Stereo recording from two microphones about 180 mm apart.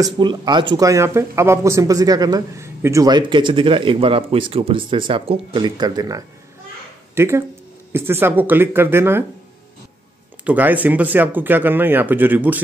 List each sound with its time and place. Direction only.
0.0 s speech: 25° right (ahead or behind)
10.4 s speech: 10° right (ahead or behind)